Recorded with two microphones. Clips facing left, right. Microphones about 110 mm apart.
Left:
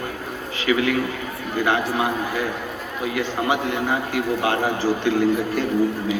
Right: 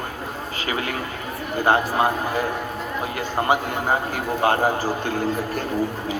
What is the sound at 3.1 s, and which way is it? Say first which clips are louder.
Speech: right 1 dB; 40° right (ahead or behind).